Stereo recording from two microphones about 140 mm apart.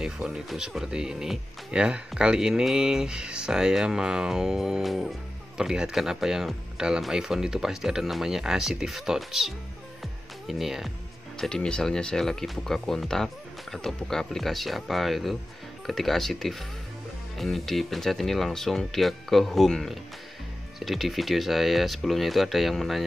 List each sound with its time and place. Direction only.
0.0 s speech: 5° right (ahead or behind)